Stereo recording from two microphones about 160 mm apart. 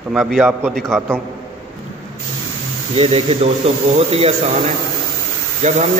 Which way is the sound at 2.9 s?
40° right (ahead or behind).